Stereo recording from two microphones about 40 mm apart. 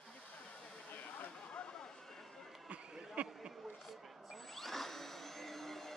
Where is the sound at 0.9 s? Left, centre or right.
Left.